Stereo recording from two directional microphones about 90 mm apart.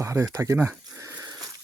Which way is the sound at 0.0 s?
30° right (ahead or behind).